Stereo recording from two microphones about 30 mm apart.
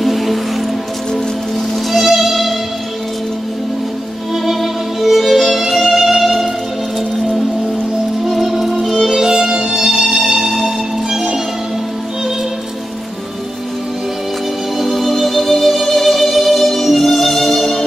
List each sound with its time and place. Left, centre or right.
0.0 s music: centre
1.9 s music: centre
4.5 s music: centre
8.3 s music: centre
9.2 s music: right
9.8 s music: centre
14.8 s music: centre
17.5 s music: centre